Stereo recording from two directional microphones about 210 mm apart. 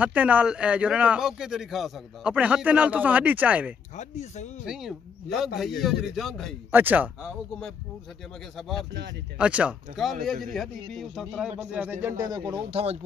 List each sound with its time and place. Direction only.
0.0 s speech: 5° right (ahead or behind)
3.9 s speech: 35° left (ahead or behind)
4.6 s speech: centre (ahead or behind)
9.4 s speech: 5° right (ahead or behind); by 13.0 s 30° right (ahead or behind)